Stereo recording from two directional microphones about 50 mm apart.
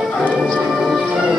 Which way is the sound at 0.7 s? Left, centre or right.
Centre.